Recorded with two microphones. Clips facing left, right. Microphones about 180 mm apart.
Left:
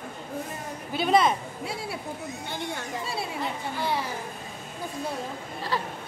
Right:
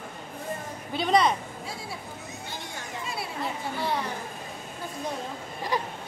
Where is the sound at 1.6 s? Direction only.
65° left (ahead or behind).